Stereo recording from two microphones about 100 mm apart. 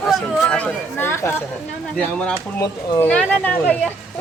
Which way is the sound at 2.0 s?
10° left (ahead or behind).